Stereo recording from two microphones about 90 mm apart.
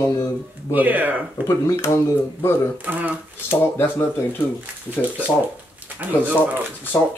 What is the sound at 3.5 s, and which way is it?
Speech, 25° left (ahead or behind).